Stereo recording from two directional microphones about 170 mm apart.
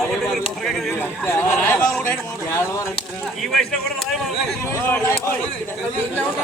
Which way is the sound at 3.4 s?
Centre (ahead or behind).